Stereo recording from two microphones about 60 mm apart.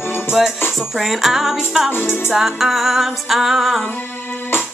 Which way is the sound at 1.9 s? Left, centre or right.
Left.